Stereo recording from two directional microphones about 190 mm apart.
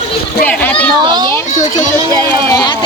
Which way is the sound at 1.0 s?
20° right (ahead or behind).